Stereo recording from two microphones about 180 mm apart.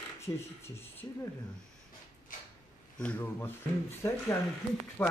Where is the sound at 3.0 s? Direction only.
10° left (ahead or behind).